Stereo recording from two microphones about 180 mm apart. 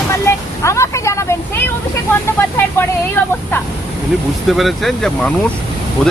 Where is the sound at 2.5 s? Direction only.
10° left (ahead or behind).